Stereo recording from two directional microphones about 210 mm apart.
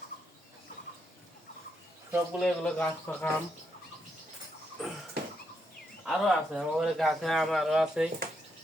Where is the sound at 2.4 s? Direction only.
5° left (ahead or behind).